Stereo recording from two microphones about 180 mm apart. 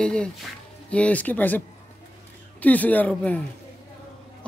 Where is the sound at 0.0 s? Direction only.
5° left (ahead or behind).